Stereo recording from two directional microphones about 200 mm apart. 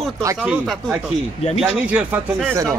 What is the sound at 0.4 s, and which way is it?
Speech, centre (ahead or behind).